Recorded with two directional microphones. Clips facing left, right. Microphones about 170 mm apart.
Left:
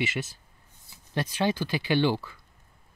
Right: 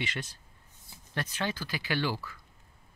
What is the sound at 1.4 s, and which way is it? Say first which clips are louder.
Speech: left 9 dB; 20° left (ahead or behind).